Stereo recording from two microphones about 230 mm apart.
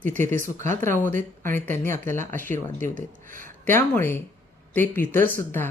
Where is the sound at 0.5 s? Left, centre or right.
Right.